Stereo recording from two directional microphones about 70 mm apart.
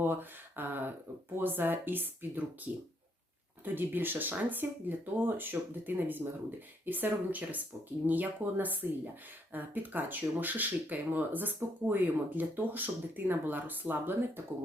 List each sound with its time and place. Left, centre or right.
0.0 s speech: right